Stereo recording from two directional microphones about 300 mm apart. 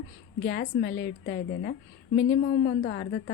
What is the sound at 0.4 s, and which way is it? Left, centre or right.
A woman's voice, left.